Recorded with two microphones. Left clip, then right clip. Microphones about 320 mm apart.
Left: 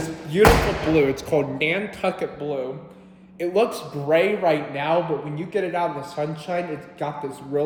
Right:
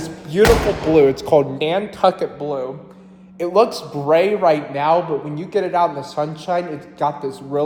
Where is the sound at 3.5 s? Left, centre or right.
Centre.